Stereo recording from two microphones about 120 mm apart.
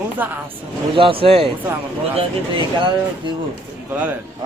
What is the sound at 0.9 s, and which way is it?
Speech, 50° right (ahead or behind).